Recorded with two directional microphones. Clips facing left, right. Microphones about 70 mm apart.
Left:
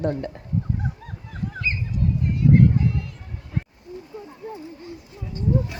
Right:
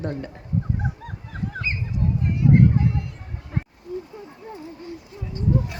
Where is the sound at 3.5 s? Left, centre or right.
Right.